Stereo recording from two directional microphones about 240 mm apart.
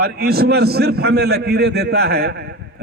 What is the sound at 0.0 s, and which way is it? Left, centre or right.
A man's voice, right.